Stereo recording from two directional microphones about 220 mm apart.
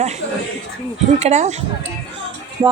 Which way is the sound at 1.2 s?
30° right (ahead or behind).